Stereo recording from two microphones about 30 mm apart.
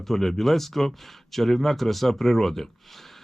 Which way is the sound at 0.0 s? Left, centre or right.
Centre.